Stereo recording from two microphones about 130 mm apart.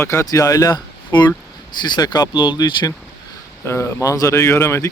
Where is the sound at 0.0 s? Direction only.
20° left (ahead or behind).